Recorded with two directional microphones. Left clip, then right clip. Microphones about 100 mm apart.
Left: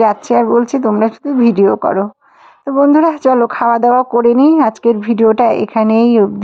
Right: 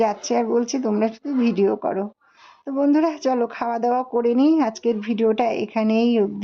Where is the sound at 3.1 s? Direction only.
35° left (ahead or behind).